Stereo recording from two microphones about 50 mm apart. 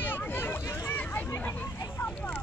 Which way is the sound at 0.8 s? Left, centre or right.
Left.